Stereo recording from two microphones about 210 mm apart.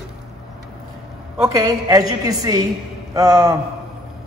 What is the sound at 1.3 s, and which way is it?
A man's voice, 15° right (ahead or behind).